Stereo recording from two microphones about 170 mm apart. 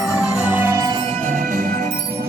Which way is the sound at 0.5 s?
15° right (ahead or behind).